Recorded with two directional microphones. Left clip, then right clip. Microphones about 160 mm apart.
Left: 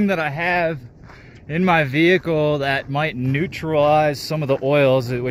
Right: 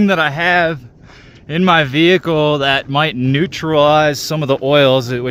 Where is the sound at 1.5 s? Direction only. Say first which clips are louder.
Right 5 dB; 35° right (ahead or behind).